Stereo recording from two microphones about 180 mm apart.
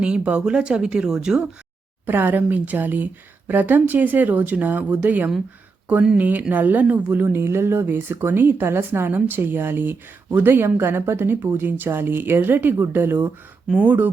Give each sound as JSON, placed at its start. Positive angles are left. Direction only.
{"t": 0.0, "sound": "a woman's voice", "side_deg": -5}